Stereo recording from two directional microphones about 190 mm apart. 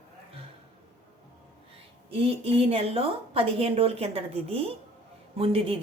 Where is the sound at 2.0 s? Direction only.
30° right (ahead or behind).